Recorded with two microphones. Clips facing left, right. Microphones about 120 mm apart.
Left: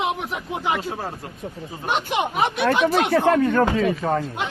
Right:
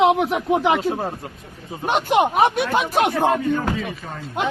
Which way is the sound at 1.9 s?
45° right (ahead or behind).